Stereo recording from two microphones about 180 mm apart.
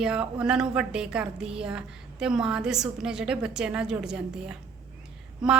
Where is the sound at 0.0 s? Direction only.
5° right (ahead or behind).